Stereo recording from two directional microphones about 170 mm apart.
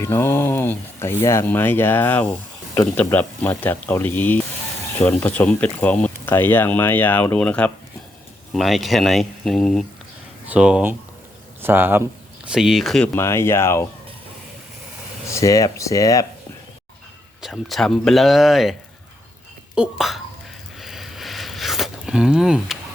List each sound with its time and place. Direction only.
0.0 s speech: 15° left (ahead or behind)
13.1 s speech: 15° left (ahead or behind)
15.3 s speech: 20° left (ahead or behind)
17.4 s speech: centre (ahead or behind)
20.7 s a sound: centre (ahead or behind)